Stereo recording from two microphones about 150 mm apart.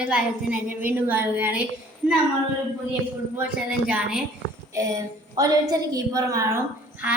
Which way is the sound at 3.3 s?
5° right (ahead or behind).